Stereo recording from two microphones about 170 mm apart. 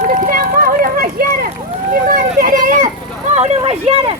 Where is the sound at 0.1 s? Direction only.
55° right (ahead or behind).